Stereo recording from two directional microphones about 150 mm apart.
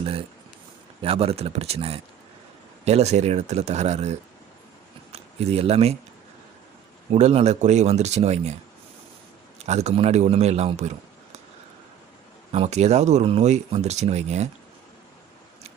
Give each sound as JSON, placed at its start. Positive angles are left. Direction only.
{"t": 0.0, "sound": "a man's voice", "side_deg": -40}
{"t": 7.1, "sound": "a man's voice", "side_deg": -45}
{"t": 9.6, "sound": "a man's voice", "side_deg": -50}
{"t": 12.5, "sound": "a man's voice", "side_deg": -45}